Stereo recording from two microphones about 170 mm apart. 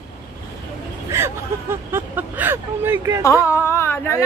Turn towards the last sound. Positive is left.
turn(degrees=15)  # may be behind; listen again after turning